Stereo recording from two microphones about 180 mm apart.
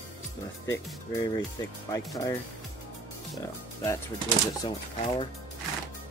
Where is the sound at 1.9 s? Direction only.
20° left (ahead or behind).